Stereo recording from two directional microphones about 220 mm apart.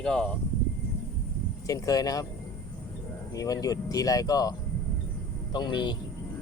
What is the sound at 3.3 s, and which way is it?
Speech, 15° left (ahead or behind).